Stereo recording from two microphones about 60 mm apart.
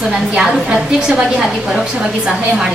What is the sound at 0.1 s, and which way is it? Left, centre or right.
A woman's voice, centre.